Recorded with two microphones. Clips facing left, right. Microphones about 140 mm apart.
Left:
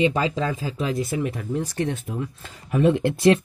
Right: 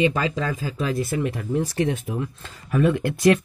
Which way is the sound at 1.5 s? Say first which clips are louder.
Right 5 dB; 5° right (ahead or behind).